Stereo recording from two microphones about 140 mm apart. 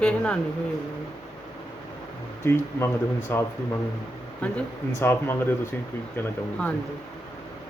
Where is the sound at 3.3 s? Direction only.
15° left (ahead or behind).